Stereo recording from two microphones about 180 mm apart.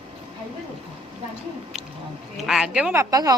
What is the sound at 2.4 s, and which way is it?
Speech, 5° right (ahead or behind).